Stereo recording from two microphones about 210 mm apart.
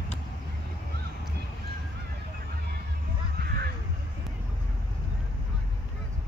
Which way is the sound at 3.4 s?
50° right (ahead or behind).